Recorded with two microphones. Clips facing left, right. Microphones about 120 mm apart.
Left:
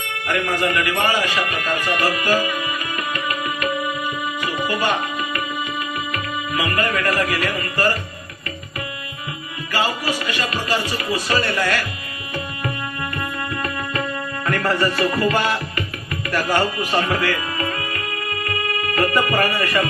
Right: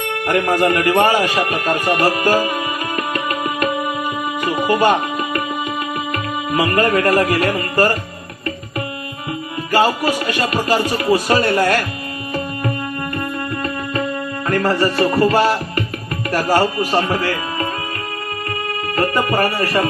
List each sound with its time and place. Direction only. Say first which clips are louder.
0.3 s speech: right 6 dB; 45° right (ahead or behind)
4.4 s music: right 8 dB; 50° right (ahead or behind)
6.5 s music: right 7 dB; 45° right (ahead or behind)
9.7 s music: right 7 dB; 45° right (ahead or behind)
14.4 s music: right 3 dB; 30° right (ahead or behind)
16.3 s speech: right 4 dB; 40° right (ahead or behind)
18.9 s speech: right 2 dB; 30° right (ahead or behind)